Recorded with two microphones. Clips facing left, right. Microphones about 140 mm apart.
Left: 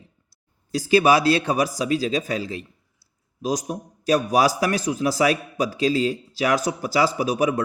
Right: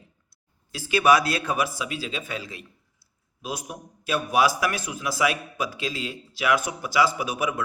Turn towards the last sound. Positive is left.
turn(degrees=35)  # may be behind; listen again after turning